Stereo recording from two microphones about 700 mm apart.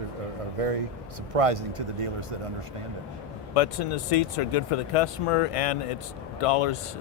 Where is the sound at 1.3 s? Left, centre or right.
Right.